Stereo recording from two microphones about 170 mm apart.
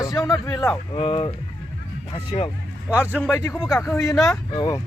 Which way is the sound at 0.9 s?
30° left (ahead or behind).